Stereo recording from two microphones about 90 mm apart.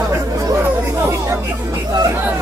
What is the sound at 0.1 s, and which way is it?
Chatter, 30° right (ahead or behind).